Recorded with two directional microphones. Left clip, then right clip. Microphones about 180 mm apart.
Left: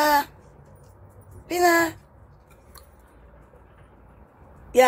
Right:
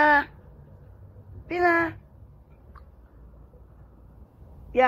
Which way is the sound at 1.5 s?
25° left (ahead or behind).